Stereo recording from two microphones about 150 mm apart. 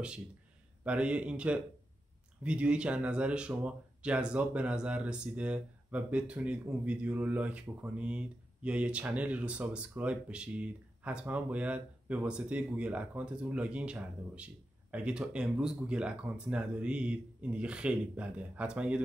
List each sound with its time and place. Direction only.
0.8 s speech: 10° right (ahead or behind)